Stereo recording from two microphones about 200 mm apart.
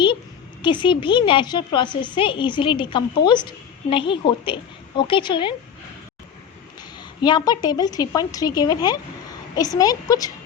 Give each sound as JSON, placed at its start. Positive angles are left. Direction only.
{"t": 0.6, "sound": "a woman's voice", "side_deg": 25}
{"t": 7.0, "sound": "a woman's voice", "side_deg": 20}